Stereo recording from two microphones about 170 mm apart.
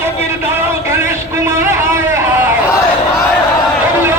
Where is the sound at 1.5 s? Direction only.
15° right (ahead or behind).